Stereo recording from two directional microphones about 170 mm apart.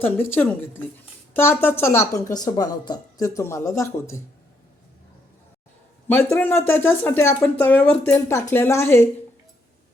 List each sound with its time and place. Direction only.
0.0 s a woman's voice: 10° left (ahead or behind)
6.3 s a woman's voice: 10° left (ahead or behind)